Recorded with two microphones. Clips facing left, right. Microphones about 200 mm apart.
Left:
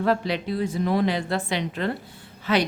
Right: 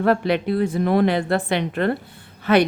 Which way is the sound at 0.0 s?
60° right (ahead or behind).